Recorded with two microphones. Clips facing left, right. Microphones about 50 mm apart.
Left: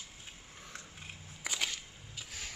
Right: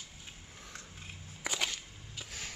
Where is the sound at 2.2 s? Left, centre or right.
Centre.